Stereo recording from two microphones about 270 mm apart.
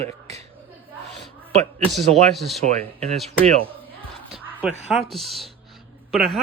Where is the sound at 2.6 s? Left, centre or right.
Right.